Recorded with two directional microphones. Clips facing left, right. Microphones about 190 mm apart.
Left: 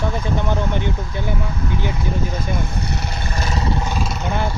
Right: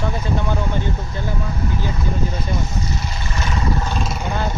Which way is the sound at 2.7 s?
65° left (ahead or behind).